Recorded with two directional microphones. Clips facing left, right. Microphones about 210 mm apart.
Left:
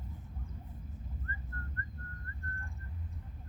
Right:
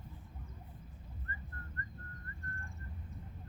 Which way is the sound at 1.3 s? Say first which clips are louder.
Right 2 dB; 20° right (ahead or behind).